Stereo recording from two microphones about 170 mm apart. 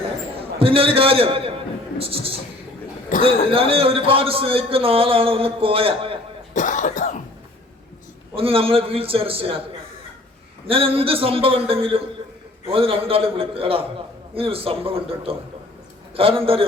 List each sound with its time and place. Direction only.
0.6 s a man's voice: 35° right (ahead or behind)
3.1 s cough: 50° left (ahead or behind)
3.5 s a man's voice: 35° right (ahead or behind)
6.5 s cough: 50° left (ahead or behind)
8.4 s a man's voice: 35° right (ahead or behind)
10.7 s a man's voice: 35° right (ahead or behind)